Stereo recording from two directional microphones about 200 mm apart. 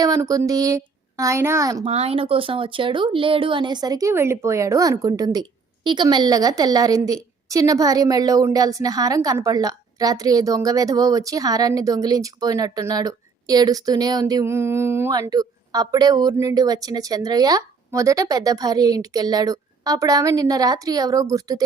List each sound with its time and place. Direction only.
0.0 s a woman's voice: 20° right (ahead or behind)
1.8 s speech: 30° right (ahead or behind)